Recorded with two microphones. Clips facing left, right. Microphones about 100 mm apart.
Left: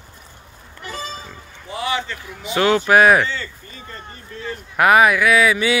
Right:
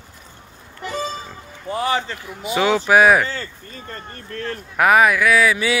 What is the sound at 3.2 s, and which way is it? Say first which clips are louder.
Speech: left 1 dB; 45° right (ahead or behind).